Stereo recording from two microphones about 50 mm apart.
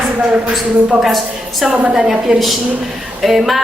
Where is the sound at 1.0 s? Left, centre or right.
Centre.